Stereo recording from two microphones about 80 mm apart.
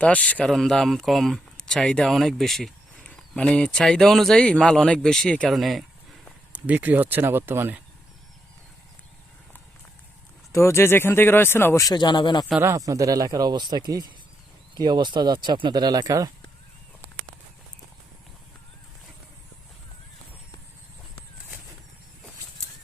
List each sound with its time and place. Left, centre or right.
0.0 s speech: centre
0.4 s speech: centre
5.5 s speech: centre
6.5 s speech: right
10.5 s speech: left
11.9 s speech: left
12.6 s speech: right
16.0 s speech: right